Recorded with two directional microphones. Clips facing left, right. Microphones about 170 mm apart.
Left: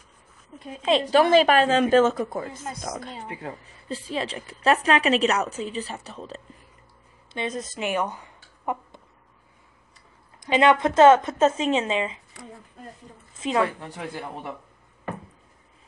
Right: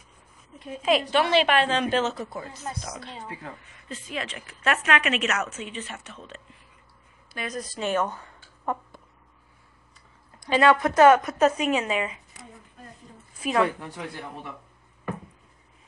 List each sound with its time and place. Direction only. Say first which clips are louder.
0.8 s a woman's voice: left 3 dB; 30° left (ahead or behind)
1.2 s a woman's voice: left 4 dB; 40° left (ahead or behind)
3.5 s speech: left 6 dB; 35° left (ahead or behind); by 9.0 s 15° left (ahead or behind)
10.4 s a woman's voice: left 1 dB; 20° left (ahead or behind)
13.3 s a woman's voice: even; 25° left (ahead or behind)